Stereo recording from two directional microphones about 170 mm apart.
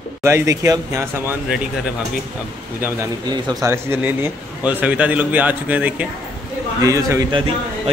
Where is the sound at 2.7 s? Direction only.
10° right (ahead or behind).